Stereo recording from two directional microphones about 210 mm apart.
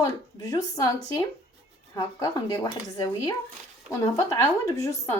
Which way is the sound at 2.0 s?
20° left (ahead or behind).